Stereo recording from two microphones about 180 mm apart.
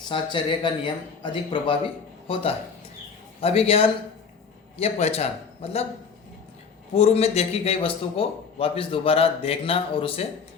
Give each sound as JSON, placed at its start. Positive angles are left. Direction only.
{"t": 0.1, "sound": "a man's voice", "side_deg": 25}
{"t": 6.9, "sound": "a man's voice", "side_deg": 35}